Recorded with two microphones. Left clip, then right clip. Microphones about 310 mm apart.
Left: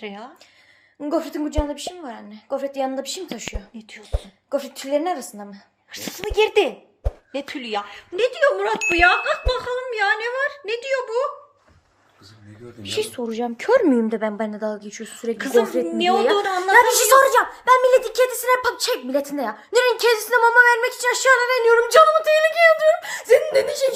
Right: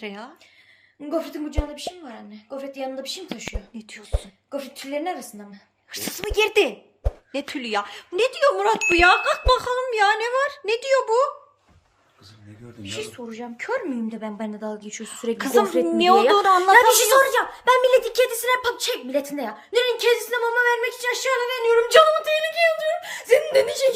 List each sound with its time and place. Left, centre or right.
0.0 s speech: centre
1.0 s a woman's voice: centre
4.5 s a woman's voice: centre
5.9 s speech: centre
12.8 s speech: left
14.1 s a woman's voice: centre
21.8 s a woman's voice: centre